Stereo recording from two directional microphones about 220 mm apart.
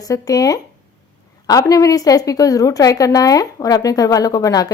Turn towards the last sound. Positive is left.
turn(degrees=15)  # may be behind; listen again after turning